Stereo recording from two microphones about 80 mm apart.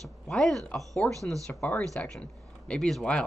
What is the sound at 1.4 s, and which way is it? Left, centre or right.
Speech, centre.